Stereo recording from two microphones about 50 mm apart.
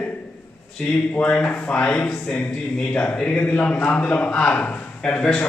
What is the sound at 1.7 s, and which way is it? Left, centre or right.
Speech, centre.